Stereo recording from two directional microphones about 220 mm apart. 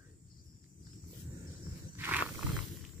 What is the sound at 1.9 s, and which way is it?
Wild animals, 10° right (ahead or behind).